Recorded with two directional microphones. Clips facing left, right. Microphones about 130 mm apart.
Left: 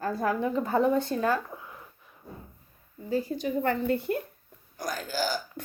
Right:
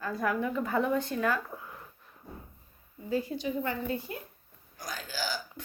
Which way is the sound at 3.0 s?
35° left (ahead or behind).